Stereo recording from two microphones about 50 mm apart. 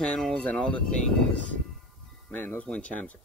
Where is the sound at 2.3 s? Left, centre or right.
Left.